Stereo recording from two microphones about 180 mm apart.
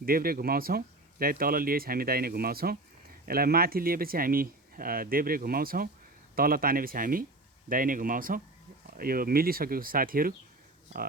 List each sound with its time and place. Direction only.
0.0 s speech: 55° right (ahead or behind)